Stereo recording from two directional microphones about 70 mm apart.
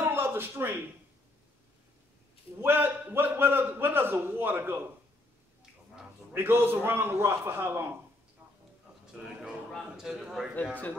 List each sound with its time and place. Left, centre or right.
0.0 s a sound: right
2.6 s a man's voice: right
6.3 s a man's voice: right
9.9 s a man's voice: centre
10.5 s a man's voice: left